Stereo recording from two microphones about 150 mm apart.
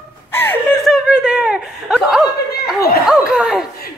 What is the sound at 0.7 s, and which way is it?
Chuckle, centre (ahead or behind).